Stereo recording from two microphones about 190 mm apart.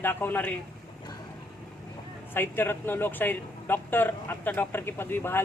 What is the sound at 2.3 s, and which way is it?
Speech, 10° left (ahead or behind).